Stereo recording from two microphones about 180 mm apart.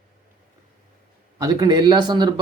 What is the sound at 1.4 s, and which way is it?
Speech, 20° right (ahead or behind).